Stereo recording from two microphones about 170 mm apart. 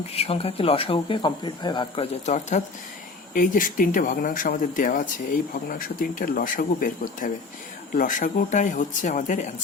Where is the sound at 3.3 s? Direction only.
55° left (ahead or behind).